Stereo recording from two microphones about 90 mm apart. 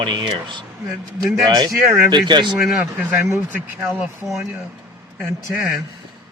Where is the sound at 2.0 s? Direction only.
60° right (ahead or behind).